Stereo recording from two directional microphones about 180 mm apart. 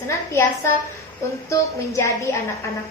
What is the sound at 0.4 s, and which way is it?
A woman's voice, 15° left (ahead or behind).